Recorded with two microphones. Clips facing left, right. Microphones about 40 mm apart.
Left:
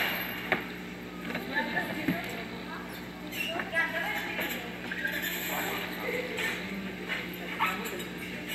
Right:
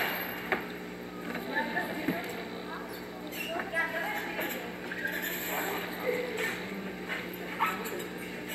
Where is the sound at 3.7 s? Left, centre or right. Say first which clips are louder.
Left 2 dB; left.